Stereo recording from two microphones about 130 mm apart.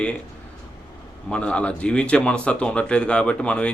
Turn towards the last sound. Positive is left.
turn(degrees=10)  # may be behind; listen again after turning